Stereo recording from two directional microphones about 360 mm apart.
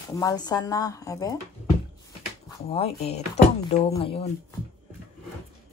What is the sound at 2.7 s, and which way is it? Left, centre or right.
Speech, centre.